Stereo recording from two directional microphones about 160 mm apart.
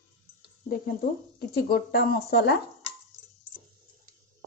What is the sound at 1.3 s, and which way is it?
Speech, 70° left (ahead or behind).